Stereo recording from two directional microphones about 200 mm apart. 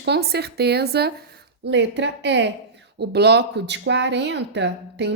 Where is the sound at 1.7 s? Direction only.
65° right (ahead or behind).